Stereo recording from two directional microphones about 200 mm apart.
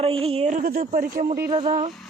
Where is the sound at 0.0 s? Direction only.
30° right (ahead or behind).